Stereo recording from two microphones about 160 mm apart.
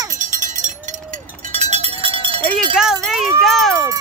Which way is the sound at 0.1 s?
50° right (ahead or behind).